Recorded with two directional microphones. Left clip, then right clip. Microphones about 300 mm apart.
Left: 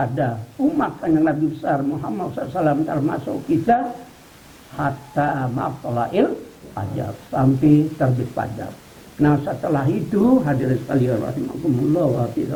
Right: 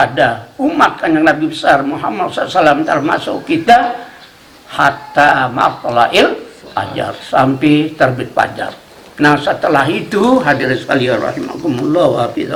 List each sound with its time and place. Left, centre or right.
0.0 s speech: centre
10.2 s speech: centre